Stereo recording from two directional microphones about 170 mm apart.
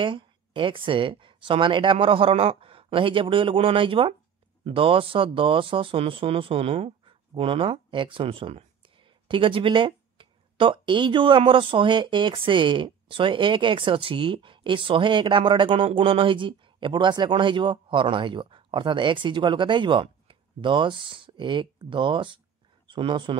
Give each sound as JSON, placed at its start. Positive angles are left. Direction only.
{"t": 0.0, "sound": "speech", "side_deg": -30}